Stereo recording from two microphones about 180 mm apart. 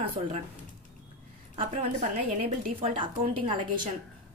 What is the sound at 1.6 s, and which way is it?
A woman's voice, 35° right (ahead or behind).